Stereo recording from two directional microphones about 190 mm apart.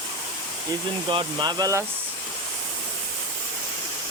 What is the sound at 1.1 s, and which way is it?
Speech, 20° right (ahead or behind).